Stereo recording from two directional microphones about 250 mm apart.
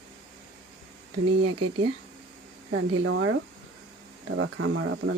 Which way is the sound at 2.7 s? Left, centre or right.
Right.